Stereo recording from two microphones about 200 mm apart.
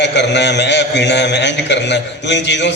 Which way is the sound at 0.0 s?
60° left (ahead or behind).